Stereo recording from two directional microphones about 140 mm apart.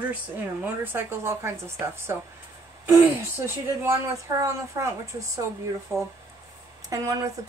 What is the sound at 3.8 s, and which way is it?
Speech, 20° right (ahead or behind).